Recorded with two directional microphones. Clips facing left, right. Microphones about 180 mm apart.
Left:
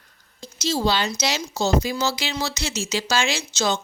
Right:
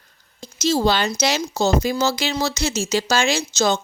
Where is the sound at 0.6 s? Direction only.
50° right (ahead or behind).